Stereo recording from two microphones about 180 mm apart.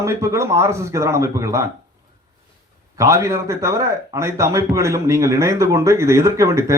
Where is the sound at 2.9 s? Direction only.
15° right (ahead or behind).